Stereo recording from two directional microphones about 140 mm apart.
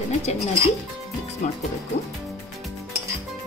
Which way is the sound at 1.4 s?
55° left (ahead or behind).